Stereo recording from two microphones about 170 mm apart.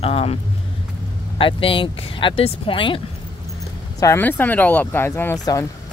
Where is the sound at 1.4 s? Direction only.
30° left (ahead or behind).